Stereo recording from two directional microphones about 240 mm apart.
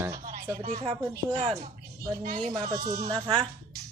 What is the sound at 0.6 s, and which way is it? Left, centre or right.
Speech, right.